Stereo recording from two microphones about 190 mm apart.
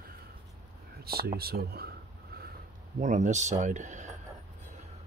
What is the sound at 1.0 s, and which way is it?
Speech, 55° right (ahead or behind).